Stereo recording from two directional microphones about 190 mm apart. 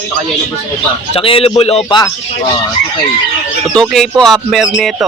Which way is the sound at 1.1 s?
30° left (ahead or behind).